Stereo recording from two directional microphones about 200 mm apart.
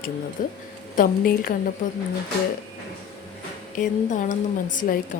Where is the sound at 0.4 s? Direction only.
45° left (ahead or behind).